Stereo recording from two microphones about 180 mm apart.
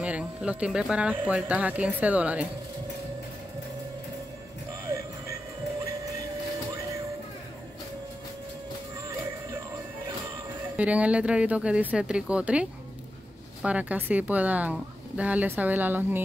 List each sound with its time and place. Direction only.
0.0 s speech: 5° right (ahead or behind)
10.8 s speech: 5° right (ahead or behind)